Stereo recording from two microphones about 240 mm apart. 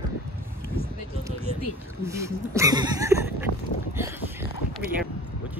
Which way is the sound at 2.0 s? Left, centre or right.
Centre.